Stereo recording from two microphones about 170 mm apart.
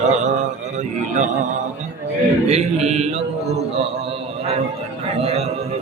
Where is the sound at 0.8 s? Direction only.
45° right (ahead or behind).